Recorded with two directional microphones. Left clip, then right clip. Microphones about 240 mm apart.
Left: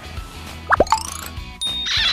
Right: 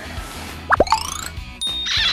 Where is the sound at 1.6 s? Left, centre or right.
Centre.